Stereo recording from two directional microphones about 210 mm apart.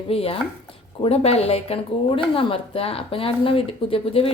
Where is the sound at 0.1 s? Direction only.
25° left (ahead or behind).